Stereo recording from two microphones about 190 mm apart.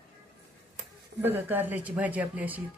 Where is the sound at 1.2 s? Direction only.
10° right (ahead or behind).